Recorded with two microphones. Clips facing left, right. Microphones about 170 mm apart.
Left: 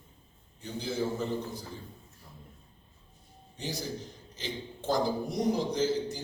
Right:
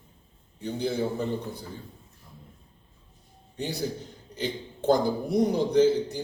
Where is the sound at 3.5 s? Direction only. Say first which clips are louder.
Right 5 dB; 60° right (ahead or behind).